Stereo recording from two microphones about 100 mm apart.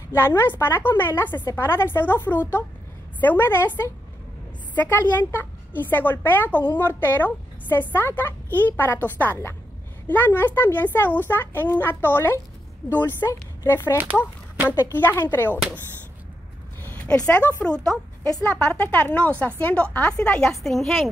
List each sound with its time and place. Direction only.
0.1 s a woman's voice: 25° left (ahead or behind)
16.8 s a woman's voice: 15° left (ahead or behind)